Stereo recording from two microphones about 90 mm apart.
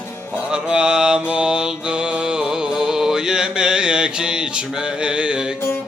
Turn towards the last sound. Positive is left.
turn(degrees=-10)  # may be behind; listen again after turning